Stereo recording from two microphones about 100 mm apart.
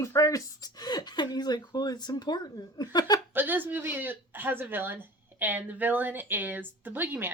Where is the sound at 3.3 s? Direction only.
20° right (ahead or behind).